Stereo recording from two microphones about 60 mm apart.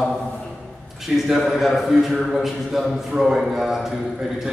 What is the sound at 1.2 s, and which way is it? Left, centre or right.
A man's voice, centre.